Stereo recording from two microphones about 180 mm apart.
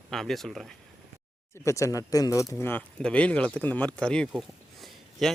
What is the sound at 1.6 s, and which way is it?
Speech, 15° left (ahead or behind).